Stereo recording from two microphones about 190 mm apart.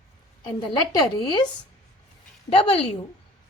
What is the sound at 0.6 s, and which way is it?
A woman's voice, 25° left (ahead or behind).